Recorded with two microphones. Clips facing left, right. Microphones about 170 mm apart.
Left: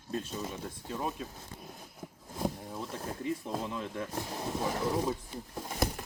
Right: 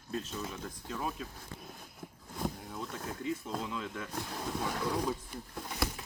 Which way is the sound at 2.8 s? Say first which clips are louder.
Left 1 dB; 25° left (ahead or behind).